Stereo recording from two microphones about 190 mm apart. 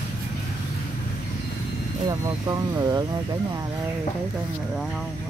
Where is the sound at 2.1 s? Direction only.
20° right (ahead or behind).